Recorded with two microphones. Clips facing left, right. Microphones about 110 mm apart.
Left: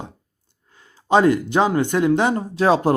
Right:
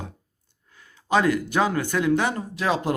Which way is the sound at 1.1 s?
25° left (ahead or behind).